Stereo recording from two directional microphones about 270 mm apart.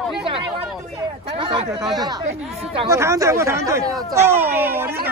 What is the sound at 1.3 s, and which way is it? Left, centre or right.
Speech, centre.